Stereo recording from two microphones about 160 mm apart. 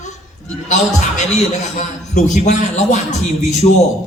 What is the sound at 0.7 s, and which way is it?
A man's voice, 50° left (ahead or behind).